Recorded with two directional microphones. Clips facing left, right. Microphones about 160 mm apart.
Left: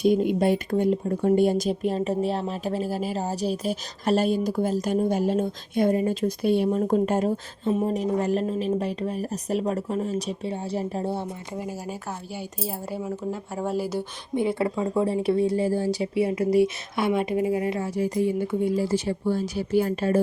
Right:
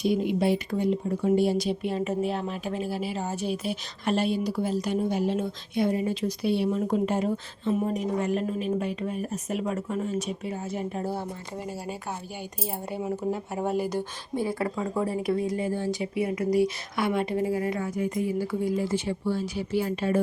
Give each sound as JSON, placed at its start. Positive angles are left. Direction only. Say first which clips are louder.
{"t": 0.0, "sound": "speech", "louder": "left 4 dB", "side_deg": 45}
{"t": 7.7, "sound": "speech", "louder": "left 3 dB", "side_deg": 30}
{"t": 11.6, "sound": "speech", "louder": "even", "side_deg": 5}
{"t": 14.3, "sound": "speech", "louder": "left 4 dB", "side_deg": 25}